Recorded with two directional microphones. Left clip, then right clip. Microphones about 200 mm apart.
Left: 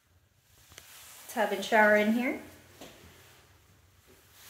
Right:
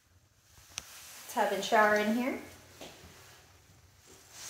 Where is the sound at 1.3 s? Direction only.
30° left (ahead or behind).